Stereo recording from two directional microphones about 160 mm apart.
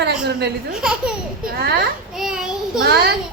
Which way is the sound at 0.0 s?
90° right.